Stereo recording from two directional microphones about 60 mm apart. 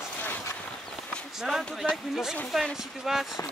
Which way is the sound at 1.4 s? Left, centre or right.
Centre.